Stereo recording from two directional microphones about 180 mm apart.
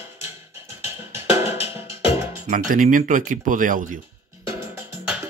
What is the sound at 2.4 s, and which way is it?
Speech, 45° right (ahead or behind).